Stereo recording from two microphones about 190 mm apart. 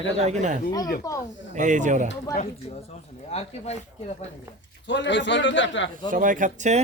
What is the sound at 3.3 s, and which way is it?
Speech, 35° left (ahead or behind).